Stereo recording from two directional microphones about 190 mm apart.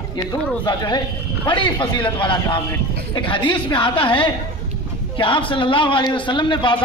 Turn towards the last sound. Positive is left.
turn(degrees=25)  # may be behind; listen again after turning